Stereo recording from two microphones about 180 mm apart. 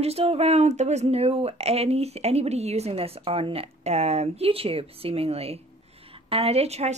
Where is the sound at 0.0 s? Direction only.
35° right (ahead or behind).